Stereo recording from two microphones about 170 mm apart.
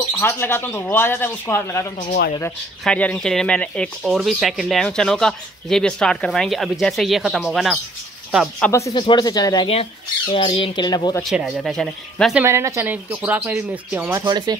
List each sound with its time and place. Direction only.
0.2 s speech: 15° left (ahead or behind); by 8.6 s 5° right (ahead or behind)
8.6 s speech: 20° left (ahead or behind)
10.3 s speech: 35° left (ahead or behind)
11.2 s speech: centre (ahead or behind)
12.4 s speech: 15° right (ahead or behind)
14.2 s speech: 25° right (ahead or behind)